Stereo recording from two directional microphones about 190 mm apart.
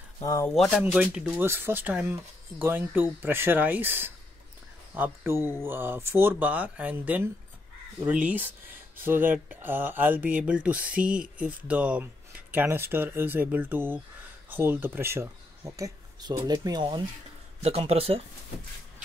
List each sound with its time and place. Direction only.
0.2 s speech: 15° left (ahead or behind)
0.6 s speech: 5° right (ahead or behind); by 17.0 s 20° right (ahead or behind)
17.6 s speech: 35° right (ahead or behind)